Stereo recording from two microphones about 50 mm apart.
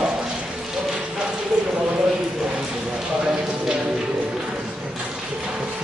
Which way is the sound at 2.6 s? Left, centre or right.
Centre.